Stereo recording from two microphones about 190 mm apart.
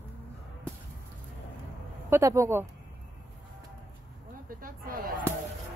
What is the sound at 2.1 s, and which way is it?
Speech, 15° right (ahead or behind).